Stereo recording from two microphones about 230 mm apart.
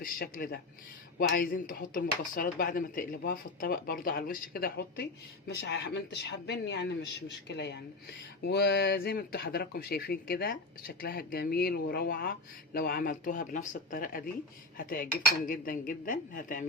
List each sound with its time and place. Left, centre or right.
0.0 s speech: left